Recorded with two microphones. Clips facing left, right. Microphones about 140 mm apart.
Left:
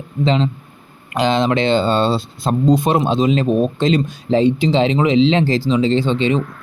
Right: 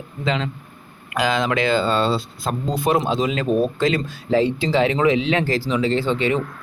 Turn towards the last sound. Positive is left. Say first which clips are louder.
# left 4 dB
turn(degrees=20)  # may be behind; listen again after turning